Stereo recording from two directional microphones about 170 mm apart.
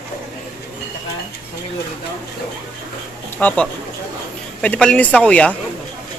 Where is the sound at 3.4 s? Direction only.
10° left (ahead or behind).